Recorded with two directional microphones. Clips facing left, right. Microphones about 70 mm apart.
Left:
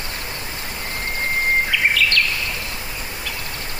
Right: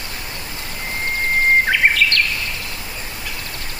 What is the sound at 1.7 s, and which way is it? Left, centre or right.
Bird vocalization, right.